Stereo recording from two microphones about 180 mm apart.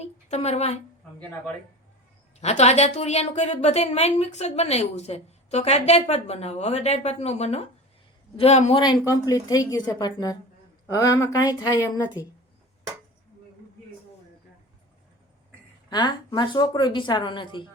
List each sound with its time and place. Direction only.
0.0 s a sound: 35° left (ahead or behind)
2.4 s a woman's voice: 35° left (ahead or behind)
8.8 s speech: 20° left (ahead or behind)
15.9 s speech: 25° left (ahead or behind)